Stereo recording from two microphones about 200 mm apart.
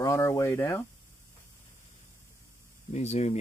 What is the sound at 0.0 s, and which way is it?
Speech, 15° left (ahead or behind).